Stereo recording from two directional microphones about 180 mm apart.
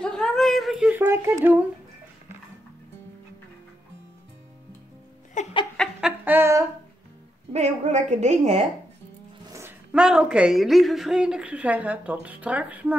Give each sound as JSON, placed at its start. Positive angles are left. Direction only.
{"t": 0.0, "sound": "speech", "side_deg": 5}
{"t": 5.4, "sound": "laughter", "side_deg": 40}
{"t": 5.8, "sound": "a sound", "side_deg": -5}
{"t": 7.5, "sound": "a woman's voice", "side_deg": -35}
{"t": 9.5, "sound": "speech", "side_deg": -15}